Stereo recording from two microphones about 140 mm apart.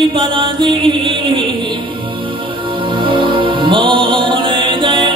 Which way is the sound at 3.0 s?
35° right (ahead or behind).